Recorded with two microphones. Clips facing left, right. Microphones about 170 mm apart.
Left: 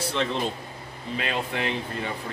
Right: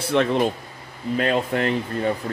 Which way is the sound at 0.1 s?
55° right (ahead or behind).